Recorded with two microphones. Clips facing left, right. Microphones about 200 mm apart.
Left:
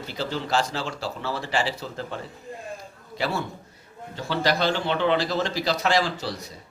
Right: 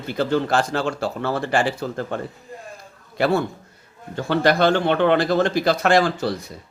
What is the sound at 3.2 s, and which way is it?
Speech, 55° right (ahead or behind).